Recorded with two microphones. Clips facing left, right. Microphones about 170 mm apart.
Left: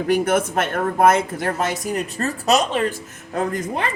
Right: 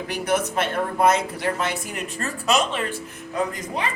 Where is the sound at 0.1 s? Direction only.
50° left (ahead or behind).